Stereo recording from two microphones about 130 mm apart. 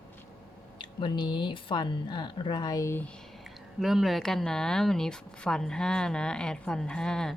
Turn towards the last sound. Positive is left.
turn(degrees=5)  # may be behind; listen again after turning